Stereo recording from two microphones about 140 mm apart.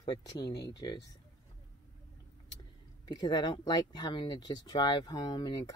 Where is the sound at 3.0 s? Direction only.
30° left (ahead or behind).